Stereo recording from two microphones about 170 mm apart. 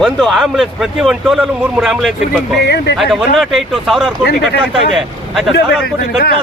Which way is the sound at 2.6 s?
75° left (ahead or behind).